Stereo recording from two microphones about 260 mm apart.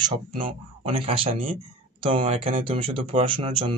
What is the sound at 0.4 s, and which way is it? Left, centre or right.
Speech, right.